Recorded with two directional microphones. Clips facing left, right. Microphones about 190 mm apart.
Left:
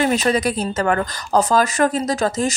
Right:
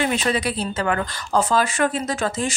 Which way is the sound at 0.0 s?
40° left (ahead or behind).